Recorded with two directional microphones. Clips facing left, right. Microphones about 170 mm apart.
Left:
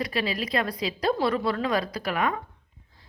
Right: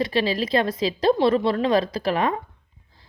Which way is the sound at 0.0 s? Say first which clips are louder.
Right 6 dB; 30° right (ahead or behind).